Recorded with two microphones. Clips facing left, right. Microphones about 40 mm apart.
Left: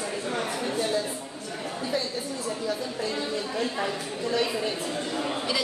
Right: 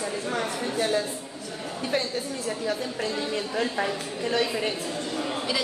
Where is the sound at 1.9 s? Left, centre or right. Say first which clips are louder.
Right 3 dB; right.